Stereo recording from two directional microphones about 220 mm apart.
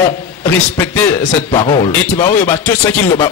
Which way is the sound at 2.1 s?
10° left (ahead or behind).